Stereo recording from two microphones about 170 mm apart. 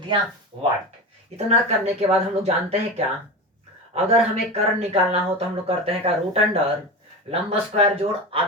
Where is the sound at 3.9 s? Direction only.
35° right (ahead or behind).